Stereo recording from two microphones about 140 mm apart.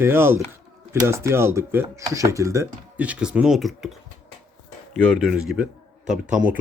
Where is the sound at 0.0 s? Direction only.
15° right (ahead or behind).